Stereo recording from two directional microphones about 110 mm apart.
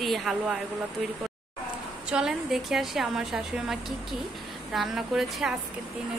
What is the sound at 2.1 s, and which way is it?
A woman's voice, 5° right (ahead or behind).